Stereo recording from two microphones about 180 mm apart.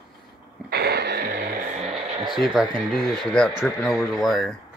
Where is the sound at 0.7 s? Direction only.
65° right (ahead or behind).